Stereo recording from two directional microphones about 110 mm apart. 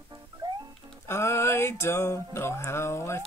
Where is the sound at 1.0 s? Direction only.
25° left (ahead or behind).